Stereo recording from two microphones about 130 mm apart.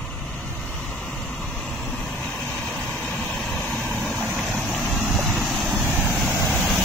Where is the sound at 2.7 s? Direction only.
5° left (ahead or behind).